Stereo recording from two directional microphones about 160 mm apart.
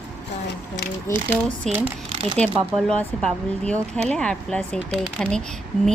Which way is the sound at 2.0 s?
35° right (ahead or behind).